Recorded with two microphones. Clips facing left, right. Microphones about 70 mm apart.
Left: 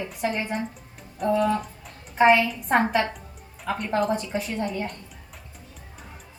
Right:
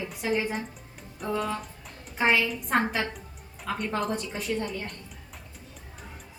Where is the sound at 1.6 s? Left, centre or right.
Centre.